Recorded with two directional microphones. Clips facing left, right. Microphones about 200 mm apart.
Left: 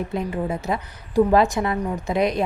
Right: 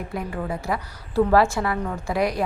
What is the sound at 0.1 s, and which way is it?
A woman's voice, 20° left (ahead or behind).